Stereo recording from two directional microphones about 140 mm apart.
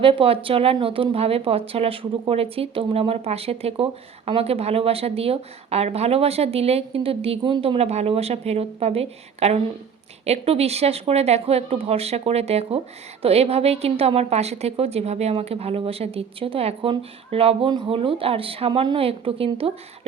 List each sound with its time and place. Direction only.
0.0 s a woman's voice: 40° right (ahead or behind)